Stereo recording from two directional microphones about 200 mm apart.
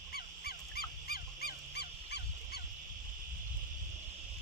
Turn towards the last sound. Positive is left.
turn(degrees=55)  # may be behind; listen again after turning